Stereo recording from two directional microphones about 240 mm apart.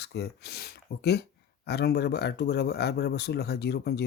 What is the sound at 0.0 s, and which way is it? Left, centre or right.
Speech, left.